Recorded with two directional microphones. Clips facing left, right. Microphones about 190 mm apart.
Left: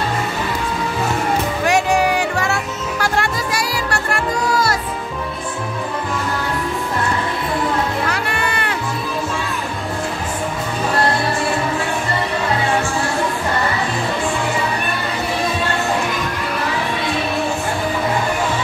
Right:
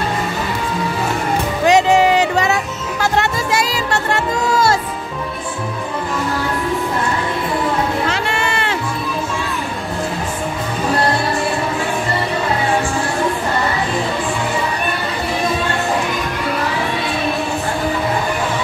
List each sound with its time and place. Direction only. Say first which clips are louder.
1.7 s music: right 5 dB; 20° right (ahead or behind)
8.1 s music: right 2 dB; 25° right (ahead or behind)